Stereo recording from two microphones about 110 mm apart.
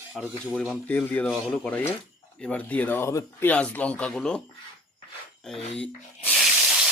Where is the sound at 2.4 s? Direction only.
10° left (ahead or behind).